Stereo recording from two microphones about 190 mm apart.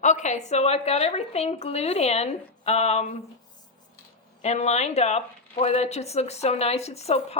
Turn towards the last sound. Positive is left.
turn(degrees=35)  # may be behind; listen again after turning